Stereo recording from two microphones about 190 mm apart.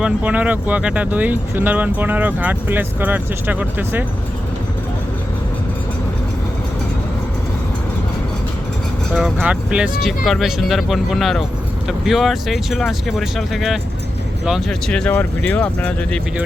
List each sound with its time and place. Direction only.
0.0 s speech: 5° right (ahead or behind)
9.1 s speech: 5° right (ahead or behind)